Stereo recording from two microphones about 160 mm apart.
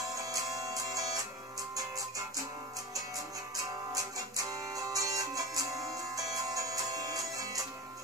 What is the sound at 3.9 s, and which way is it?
Music, 20° right (ahead or behind).